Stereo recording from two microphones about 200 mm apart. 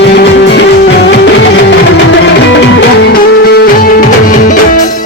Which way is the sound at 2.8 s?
60° left (ahead or behind).